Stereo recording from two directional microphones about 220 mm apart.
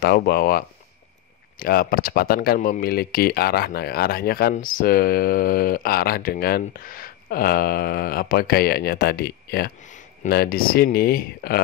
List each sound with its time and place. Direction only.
0.0 s speech: 45° left (ahead or behind)